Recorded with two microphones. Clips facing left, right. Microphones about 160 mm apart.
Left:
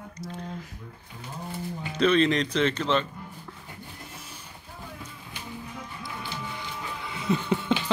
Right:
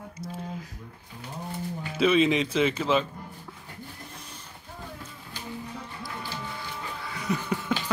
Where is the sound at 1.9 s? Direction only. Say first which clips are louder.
Even; 5° right (ahead or behind).